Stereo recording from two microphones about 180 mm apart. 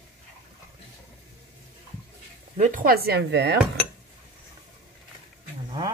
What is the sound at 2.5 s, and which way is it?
Speech, 45° right (ahead or behind).